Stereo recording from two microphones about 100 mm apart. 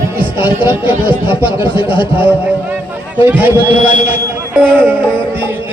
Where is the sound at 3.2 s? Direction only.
20° right (ahead or behind).